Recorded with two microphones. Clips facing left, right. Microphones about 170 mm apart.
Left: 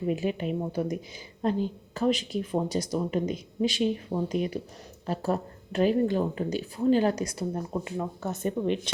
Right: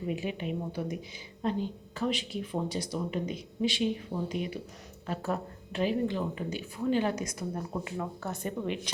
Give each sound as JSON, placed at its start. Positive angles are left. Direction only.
{"t": 0.1, "sound": "speech", "side_deg": 40}
{"t": 7.7, "sound": "speech", "side_deg": 20}